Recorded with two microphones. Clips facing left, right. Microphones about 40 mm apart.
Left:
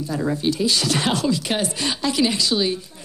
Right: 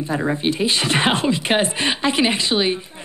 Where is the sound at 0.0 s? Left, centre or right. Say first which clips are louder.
Right 2 dB; right.